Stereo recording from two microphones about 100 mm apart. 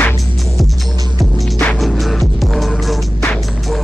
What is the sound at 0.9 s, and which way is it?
Music, 40° right (ahead or behind).